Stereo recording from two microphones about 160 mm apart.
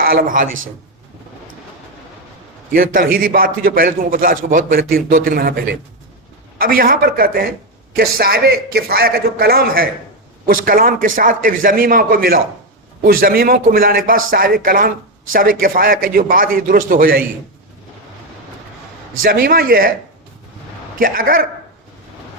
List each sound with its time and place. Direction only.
0.0 s speech: 65° right (ahead or behind)
2.7 s a man's voice: 65° right (ahead or behind)
19.2 s a man's voice: 65° right (ahead or behind)
21.0 s a man's voice: 60° right (ahead or behind)